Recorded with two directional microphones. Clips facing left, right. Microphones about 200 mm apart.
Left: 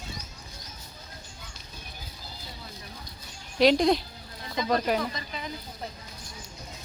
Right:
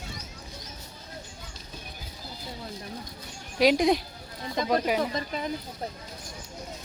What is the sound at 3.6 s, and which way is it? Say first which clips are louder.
Speech: left 1 dB; 15° right (ahead or behind).